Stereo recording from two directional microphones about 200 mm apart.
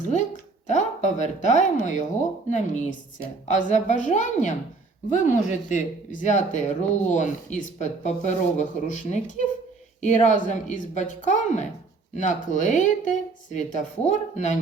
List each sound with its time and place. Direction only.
0.7 s speech: 40° left (ahead or behind)